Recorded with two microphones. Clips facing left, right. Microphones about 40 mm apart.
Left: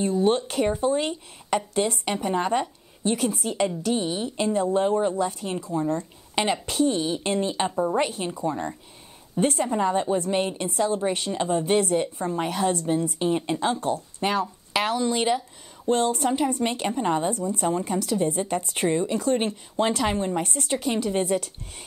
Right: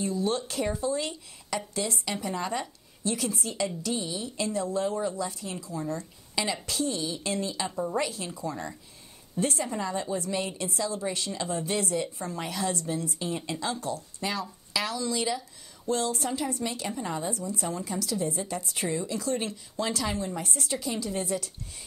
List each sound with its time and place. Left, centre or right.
0.0 s speech: left